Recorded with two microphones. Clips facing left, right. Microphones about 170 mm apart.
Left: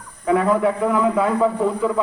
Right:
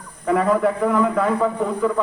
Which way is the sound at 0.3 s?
Centre (ahead or behind).